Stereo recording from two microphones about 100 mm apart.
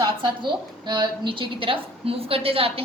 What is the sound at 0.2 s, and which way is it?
A woman's voice, 50° right (ahead or behind).